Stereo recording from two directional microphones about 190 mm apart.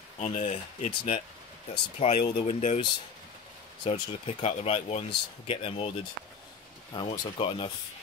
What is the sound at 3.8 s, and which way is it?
Speech, 35° left (ahead or behind).